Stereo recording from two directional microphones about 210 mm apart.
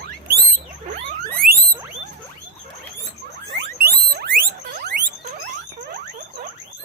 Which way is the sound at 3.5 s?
50° right (ahead or behind).